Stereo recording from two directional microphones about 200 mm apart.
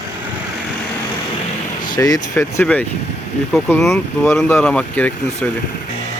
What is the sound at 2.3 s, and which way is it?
Speech, 15° left (ahead or behind).